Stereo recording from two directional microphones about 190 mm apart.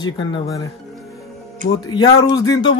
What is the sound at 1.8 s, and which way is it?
Speech, 20° left (ahead or behind).